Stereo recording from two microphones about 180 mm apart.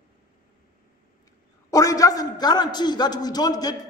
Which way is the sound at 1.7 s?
20° left (ahead or behind).